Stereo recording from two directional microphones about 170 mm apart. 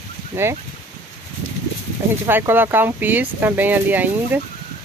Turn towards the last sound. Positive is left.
turn(degrees=-10)  # may be behind; listen again after turning